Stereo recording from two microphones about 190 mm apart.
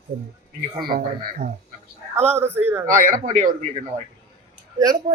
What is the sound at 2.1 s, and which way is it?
Speech, 35° right (ahead or behind).